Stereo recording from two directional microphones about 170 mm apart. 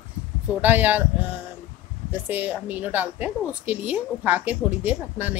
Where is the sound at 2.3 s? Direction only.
10° right (ahead or behind).